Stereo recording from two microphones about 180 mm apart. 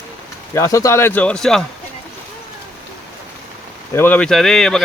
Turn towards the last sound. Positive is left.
turn(degrees=0)  # may be behind; listen again after turning